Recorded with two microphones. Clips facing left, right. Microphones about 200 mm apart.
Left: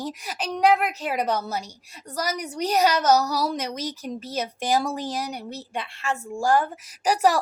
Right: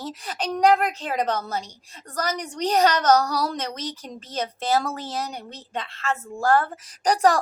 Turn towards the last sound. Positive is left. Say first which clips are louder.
# right 1 dB
turn(degrees=5)  # may be behind; listen again after turning